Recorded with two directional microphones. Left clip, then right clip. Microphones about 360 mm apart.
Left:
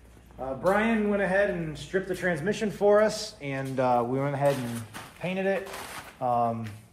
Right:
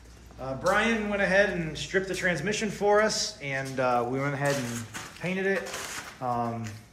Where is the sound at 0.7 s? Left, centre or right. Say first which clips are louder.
Even; left.